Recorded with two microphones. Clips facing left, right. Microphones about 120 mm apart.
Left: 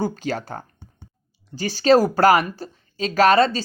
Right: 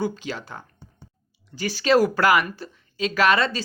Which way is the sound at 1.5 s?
30° left (ahead or behind).